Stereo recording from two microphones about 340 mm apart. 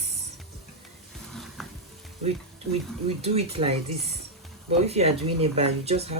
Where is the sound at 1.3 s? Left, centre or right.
Centre.